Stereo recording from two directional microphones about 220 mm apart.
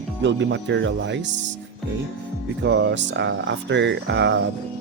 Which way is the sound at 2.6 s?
50° right (ahead or behind).